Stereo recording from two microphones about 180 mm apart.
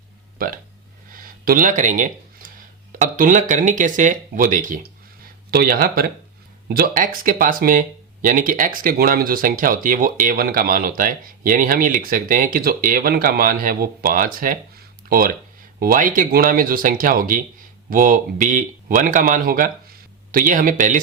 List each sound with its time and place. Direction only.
0.3 s speech: 50° right (ahead or behind)
1.1 s a sound: 50° right (ahead or behind)
3.0 s speech: 45° right (ahead or behind)